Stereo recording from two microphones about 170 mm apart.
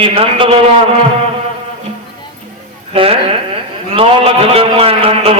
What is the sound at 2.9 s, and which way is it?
A man's voice, 35° right (ahead or behind).